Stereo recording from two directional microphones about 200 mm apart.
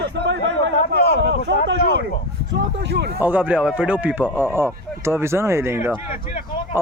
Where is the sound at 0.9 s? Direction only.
55° left (ahead or behind).